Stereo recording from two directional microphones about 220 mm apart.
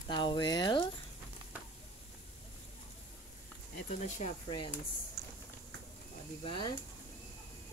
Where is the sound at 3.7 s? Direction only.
35° left (ahead or behind).